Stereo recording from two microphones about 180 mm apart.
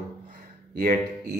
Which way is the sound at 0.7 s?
55° right (ahead or behind).